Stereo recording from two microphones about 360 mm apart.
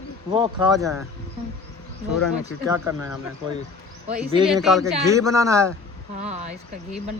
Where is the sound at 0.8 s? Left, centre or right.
Centre.